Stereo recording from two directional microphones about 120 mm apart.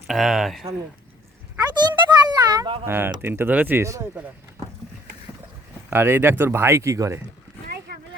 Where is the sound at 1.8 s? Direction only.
40° right (ahead or behind).